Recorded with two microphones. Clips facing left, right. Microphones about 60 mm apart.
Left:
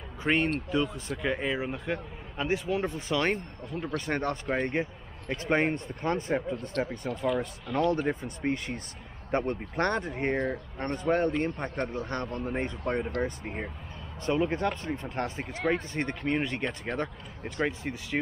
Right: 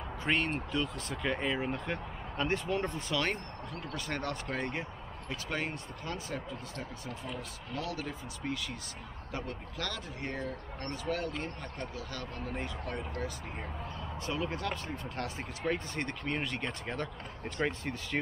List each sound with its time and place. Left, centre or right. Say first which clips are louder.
0.2 s speech: left 5 dB; left
3.2 s speech: left 5 dB; left
5.3 s speech: left 10 dB; left
6.9 s speech: left 11 dB; left
17.6 s speech: left 3 dB; centre